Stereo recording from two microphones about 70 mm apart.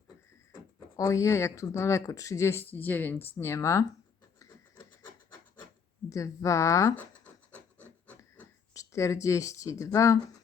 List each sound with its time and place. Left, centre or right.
1.0 s speech: left
2.6 s speech: left
6.1 s speech: left
8.7 s speech: left